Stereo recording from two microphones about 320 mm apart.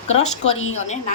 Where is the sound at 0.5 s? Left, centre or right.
Left.